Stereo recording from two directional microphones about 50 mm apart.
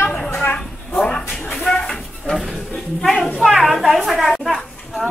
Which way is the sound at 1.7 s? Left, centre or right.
Centre.